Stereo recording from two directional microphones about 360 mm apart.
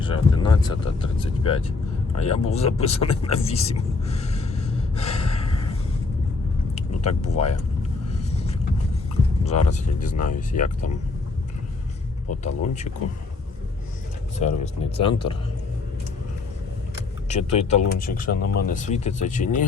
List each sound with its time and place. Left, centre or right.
0.0 s speech: centre
6.7 s speech: centre
9.5 s speech: centre
12.4 s speech: centre
14.3 s speech: centre
17.2 s speech: centre